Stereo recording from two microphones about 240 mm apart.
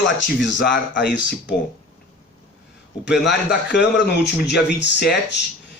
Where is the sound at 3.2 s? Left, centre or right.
Left.